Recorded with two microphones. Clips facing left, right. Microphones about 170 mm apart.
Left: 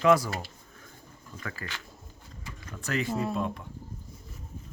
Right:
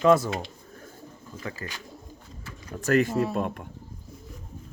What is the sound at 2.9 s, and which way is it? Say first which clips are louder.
Speech: right 7 dB; 50° right (ahead or behind).